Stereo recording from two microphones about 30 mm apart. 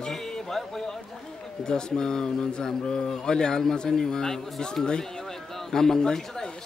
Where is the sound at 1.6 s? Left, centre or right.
Left.